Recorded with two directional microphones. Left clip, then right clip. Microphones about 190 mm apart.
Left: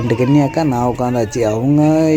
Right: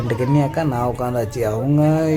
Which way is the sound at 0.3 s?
30° left (ahead or behind).